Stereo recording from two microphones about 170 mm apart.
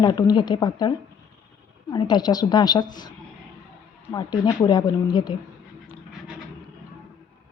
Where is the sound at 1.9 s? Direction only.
25° left (ahead or behind).